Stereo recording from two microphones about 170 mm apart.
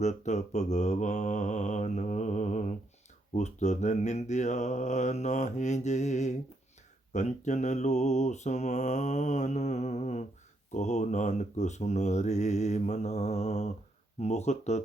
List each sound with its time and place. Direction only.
0.0 s mantra: 45° left (ahead or behind)
14.2 s speech: 40° left (ahead or behind)